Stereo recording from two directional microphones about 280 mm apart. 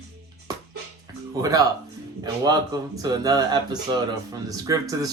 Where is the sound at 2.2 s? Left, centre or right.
Centre.